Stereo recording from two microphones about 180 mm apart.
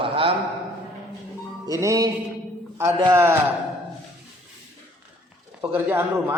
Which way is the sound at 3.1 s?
15° right (ahead or behind).